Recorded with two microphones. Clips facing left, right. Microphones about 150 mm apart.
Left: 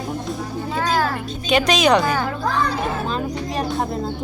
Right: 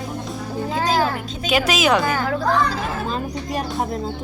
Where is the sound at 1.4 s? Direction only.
5° right (ahead or behind).